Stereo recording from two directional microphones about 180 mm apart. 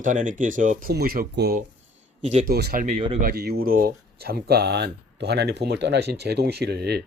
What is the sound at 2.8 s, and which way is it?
Speech, 40° right (ahead or behind).